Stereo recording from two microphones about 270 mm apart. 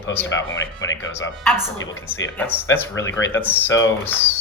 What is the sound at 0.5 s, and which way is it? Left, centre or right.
Speech, left.